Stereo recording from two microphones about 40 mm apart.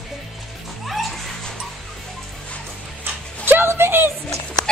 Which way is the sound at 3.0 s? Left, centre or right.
Right.